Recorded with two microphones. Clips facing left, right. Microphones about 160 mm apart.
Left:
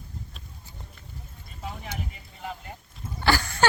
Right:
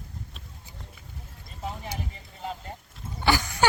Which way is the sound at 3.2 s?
15° right (ahead or behind).